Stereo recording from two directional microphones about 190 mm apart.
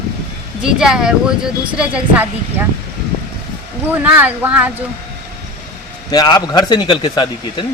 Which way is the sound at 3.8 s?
10° right (ahead or behind).